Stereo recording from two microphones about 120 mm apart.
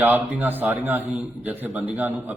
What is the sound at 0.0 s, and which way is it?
A man's voice, 15° right (ahead or behind).